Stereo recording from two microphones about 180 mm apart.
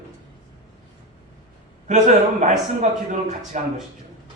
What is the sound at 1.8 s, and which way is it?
Speech, 45° right (ahead or behind).